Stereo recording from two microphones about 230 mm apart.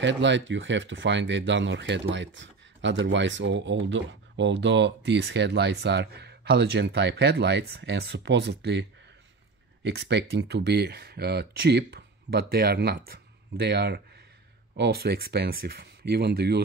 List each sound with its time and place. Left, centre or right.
0.0 s speech: right
9.8 s speech: right